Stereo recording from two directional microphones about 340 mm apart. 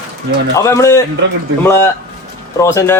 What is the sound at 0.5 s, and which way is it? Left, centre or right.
Speech, centre.